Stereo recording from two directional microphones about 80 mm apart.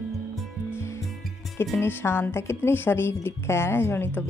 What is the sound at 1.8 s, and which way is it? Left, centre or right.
A woman's voice, left.